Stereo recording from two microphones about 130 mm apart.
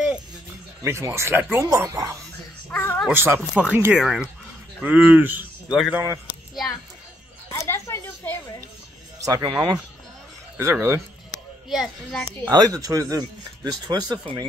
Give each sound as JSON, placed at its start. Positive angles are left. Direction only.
{"t": 0.8, "sound": "speech", "side_deg": -20}
{"t": 2.7, "sound": "a sound", "side_deg": 15}
{"t": 3.1, "sound": "a man's voice", "side_deg": -15}
{"t": 7.5, "sound": "a sound", "side_deg": 20}
{"t": 9.2, "sound": "speech", "side_deg": -30}
{"t": 10.6, "sound": "speech", "side_deg": -20}
{"t": 11.7, "sound": "a child's voice", "side_deg": 0}
{"t": 12.4, "sound": "speech", "side_deg": -30}